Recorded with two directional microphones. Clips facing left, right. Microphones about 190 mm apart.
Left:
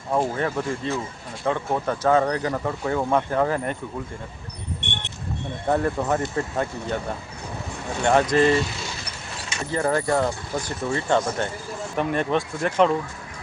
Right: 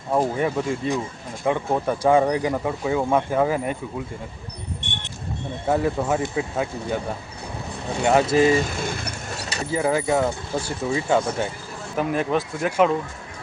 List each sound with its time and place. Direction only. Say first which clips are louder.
0.1 s speech: right 2 dB; 10° right (ahead or behind)
5.6 s speech: right 1 dB; 5° right (ahead or behind)
8.0 s speech: right 1 dB; 5° right (ahead or behind)
8.5 s a sound: right 2 dB; 50° right (ahead or behind)
9.7 s speech: right 1 dB; 5° right (ahead or behind)